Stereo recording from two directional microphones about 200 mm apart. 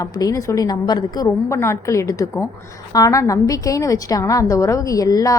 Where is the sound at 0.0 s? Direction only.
15° left (ahead or behind).